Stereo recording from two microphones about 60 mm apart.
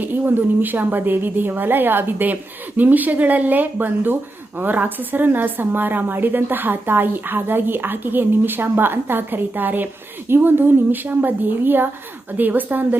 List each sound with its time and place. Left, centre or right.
0.6 s a woman's voice: right